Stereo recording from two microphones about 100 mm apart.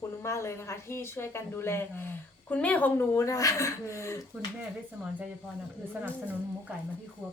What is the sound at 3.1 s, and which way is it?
Speech, 30° left (ahead or behind).